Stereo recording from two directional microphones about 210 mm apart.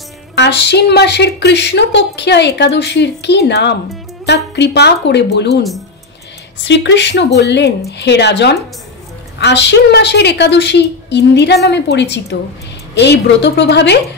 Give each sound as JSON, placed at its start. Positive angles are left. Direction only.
{"t": 0.4, "sound": "a woman's voice", "side_deg": 55}
{"t": 6.6, "sound": "speech", "side_deg": 55}